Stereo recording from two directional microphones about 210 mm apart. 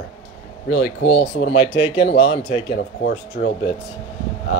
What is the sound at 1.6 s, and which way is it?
Speech, 25° left (ahead or behind).